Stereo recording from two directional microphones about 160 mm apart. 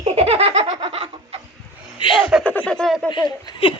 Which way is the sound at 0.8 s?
35° right (ahead or behind).